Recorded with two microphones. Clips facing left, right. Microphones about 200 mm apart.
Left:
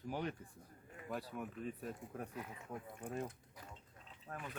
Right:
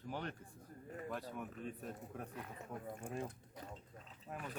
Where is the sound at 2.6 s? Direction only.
40° right (ahead or behind).